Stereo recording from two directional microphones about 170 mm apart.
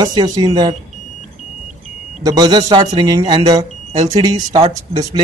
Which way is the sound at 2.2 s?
25° right (ahead or behind).